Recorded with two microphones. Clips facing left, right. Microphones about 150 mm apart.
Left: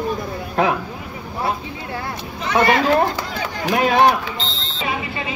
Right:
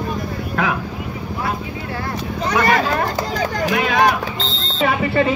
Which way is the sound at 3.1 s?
40° right (ahead or behind).